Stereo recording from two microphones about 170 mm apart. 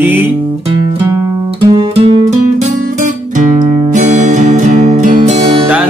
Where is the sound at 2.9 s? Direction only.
50° right (ahead or behind).